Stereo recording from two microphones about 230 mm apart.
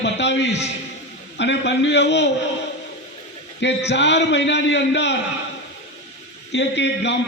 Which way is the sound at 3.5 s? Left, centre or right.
Left.